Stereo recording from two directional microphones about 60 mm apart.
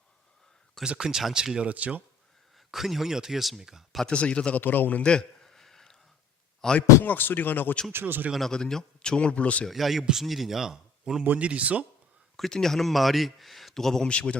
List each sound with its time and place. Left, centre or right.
0.9 s speech: centre
1.7 s speech: right
2.7 s speech: centre
4.1 s speech: centre
4.6 s a sound: left; by 6.0 s centre
6.6 s a man's voice: centre
7.0 s speech: left
7.9 s speech: right
8.3 s a man's voice: centre; by 9.6 s left
9.6 s speech: centre
11.2 s speech: right
12.4 s speech: centre
14.1 s a man's voice: centre